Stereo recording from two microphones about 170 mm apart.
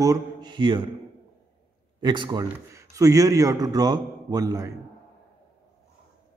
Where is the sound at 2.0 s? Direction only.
30° right (ahead or behind).